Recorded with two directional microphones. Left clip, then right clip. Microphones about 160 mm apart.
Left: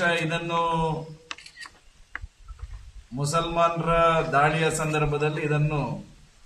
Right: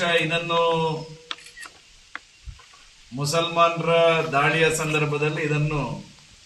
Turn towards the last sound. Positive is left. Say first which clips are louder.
# right 2 dB
turn(degrees=-5)  # may be behind; listen again after turning